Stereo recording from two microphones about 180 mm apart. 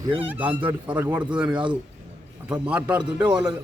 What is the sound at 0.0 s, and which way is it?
Speech, 30° right (ahead or behind).